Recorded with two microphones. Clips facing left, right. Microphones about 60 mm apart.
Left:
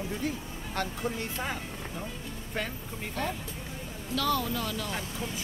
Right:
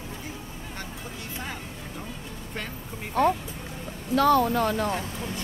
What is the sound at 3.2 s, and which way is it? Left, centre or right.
Speech, right.